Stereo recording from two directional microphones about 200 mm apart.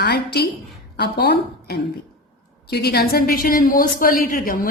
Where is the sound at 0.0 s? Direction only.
55° left (ahead or behind).